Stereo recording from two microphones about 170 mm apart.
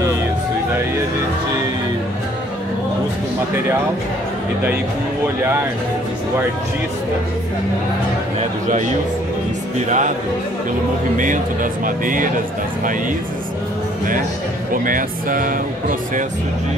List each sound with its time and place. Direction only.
9.8 s speech: 45° right (ahead or behind)
11.1 s speech: 50° right (ahead or behind)
14.7 s speech: 55° right (ahead or behind)